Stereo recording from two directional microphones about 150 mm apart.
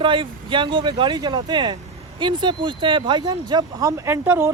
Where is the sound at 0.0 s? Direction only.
35° right (ahead or behind).